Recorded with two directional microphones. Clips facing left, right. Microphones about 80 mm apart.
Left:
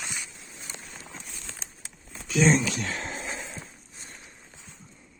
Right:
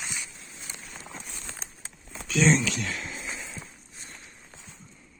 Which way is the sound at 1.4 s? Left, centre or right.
Right.